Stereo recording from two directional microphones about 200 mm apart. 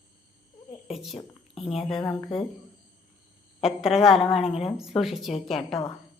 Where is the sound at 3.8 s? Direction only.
Centre (ahead or behind).